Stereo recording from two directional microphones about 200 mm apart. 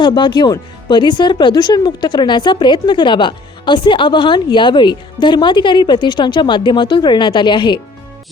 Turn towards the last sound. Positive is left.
turn(degrees=25)  # may be behind; listen again after turning